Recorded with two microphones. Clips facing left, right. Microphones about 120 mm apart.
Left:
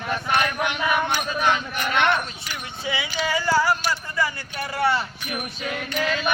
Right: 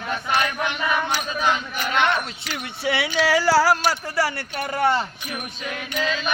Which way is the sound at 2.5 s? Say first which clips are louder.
Right 4 dB; 70° right (ahead or behind).